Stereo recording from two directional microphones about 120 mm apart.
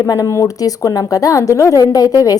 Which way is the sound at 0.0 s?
30° left (ahead or behind).